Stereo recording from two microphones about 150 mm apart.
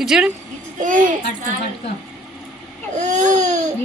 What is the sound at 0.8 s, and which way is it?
Speech, 60° right (ahead or behind).